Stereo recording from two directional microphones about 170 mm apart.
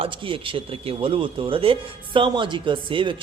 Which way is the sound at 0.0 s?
30° right (ahead or behind).